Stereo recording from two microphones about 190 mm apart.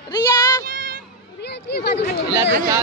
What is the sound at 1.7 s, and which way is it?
Speech, 60° left (ahead or behind).